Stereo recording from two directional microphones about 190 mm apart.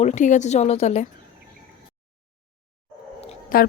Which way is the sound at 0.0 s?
40° left (ahead or behind).